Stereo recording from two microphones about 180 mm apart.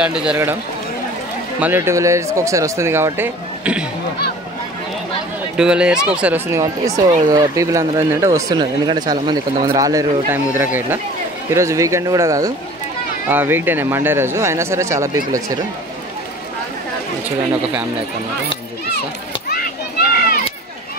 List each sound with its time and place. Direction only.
0.0 s speech: 5° right (ahead or behind)
1.6 s speech: 15° right (ahead or behind)
5.6 s speech: 5° right (ahead or behind)
19.5 s children playing: 55° left (ahead or behind)